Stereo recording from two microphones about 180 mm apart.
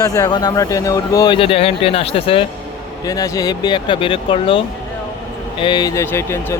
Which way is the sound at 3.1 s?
20° left (ahead or behind).